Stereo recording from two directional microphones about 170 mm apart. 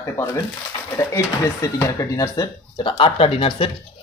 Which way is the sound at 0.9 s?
15° left (ahead or behind).